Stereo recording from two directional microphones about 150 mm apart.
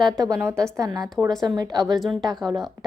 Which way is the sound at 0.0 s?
25° right (ahead or behind).